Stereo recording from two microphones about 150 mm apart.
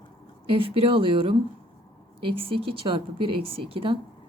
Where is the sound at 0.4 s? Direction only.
35° right (ahead or behind).